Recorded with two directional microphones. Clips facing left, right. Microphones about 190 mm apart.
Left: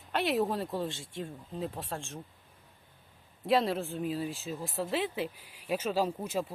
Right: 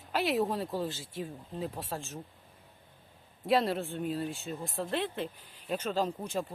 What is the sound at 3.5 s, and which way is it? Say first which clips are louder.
Speech: even; centre (ahead or behind).